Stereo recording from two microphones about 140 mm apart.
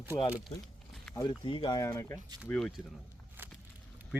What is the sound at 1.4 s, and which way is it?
Speech, 35° left (ahead or behind).